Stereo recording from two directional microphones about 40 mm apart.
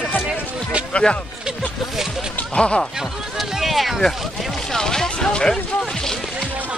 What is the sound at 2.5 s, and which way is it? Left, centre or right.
Speech, left.